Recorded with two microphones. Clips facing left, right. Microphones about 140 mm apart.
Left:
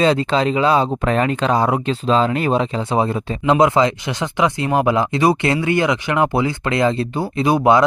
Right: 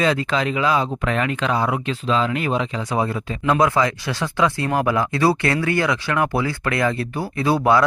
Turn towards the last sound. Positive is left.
turn(degrees=20)  # may be behind; listen again after turning